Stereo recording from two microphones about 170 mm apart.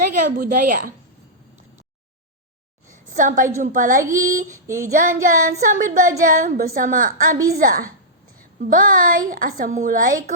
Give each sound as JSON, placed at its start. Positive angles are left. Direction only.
{"t": 0.0, "sound": "speech", "side_deg": -55}
{"t": 2.9, "sound": "a woman's voice", "side_deg": -50}
{"t": 4.0, "sound": "child singing", "side_deg": -20}
{"t": 5.2, "sound": "a woman's voice", "side_deg": -45}